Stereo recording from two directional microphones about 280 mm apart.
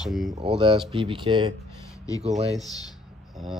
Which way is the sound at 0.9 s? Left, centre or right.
Centre.